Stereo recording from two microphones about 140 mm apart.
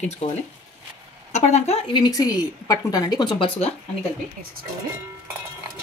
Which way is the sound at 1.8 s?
30° left (ahead or behind).